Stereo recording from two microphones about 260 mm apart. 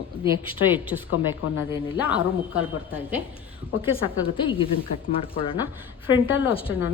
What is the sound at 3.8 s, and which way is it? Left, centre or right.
A woman's voice, centre.